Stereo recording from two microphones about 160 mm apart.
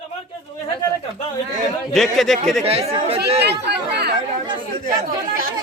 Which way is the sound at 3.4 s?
90° right.